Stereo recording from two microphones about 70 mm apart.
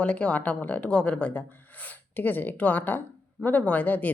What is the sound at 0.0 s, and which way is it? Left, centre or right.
Speech, centre.